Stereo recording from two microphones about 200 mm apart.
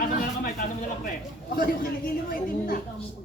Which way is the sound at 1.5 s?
45° left (ahead or behind).